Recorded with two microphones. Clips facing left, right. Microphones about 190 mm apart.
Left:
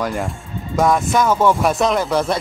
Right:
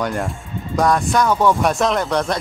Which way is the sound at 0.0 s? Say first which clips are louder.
Even; centre (ahead or behind).